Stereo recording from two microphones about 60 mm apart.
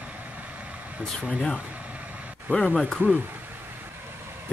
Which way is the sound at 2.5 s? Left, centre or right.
Right.